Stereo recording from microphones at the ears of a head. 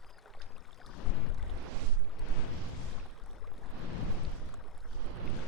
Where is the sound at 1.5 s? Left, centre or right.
Right.